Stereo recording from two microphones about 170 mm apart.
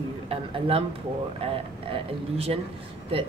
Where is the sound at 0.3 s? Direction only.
35° right (ahead or behind).